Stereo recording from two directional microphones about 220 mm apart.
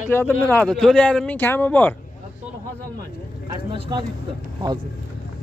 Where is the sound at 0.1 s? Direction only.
10° left (ahead or behind).